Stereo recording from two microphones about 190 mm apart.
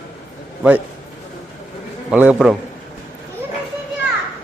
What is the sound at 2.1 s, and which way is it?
Speech, 5° right (ahead or behind).